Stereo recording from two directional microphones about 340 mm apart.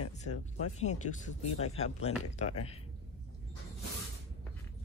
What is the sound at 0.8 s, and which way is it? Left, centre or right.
Speech, left.